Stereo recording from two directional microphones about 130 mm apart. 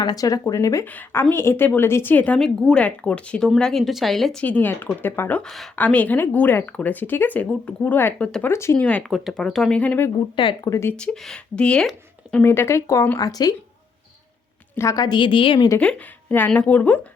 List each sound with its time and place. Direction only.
0.0 s speech: 30° left (ahead or behind)
0.9 s a woman's voice: 15° left (ahead or behind)
5.4 s a woman's voice: 5° left (ahead or behind)
10.6 s speech: 20° left (ahead or behind)
10.9 s speech: 5° left (ahead or behind)
12.4 s speech: 20° left (ahead or behind)
14.8 s a woman's voice: 25° left (ahead or behind)
15.8 s a woman's voice: 10° left (ahead or behind)